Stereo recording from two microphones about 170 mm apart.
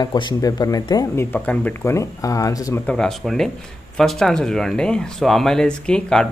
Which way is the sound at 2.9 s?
5° left (ahead or behind).